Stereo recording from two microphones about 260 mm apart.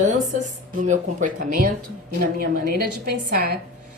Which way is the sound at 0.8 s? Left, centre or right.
Right.